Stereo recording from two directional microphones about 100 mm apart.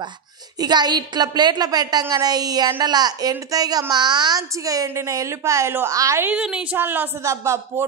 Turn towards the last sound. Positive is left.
turn(degrees=-35)  # may be behind; listen again after turning